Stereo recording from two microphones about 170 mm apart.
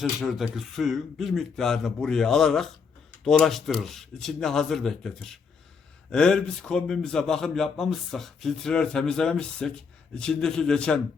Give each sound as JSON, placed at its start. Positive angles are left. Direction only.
{"t": 0.0, "sound": "a man's voice", "side_deg": 0}